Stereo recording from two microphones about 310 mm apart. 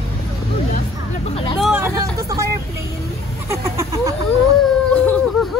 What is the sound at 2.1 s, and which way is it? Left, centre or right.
Vehicle, centre.